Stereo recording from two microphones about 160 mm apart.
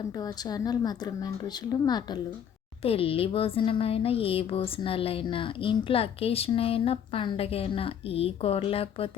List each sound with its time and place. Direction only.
0.2 s a woman's voice: 25° left (ahead or behind)
2.8 s a woman's voice: 35° left (ahead or behind)